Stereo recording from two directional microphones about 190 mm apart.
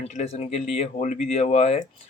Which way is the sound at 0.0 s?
35° left (ahead or behind).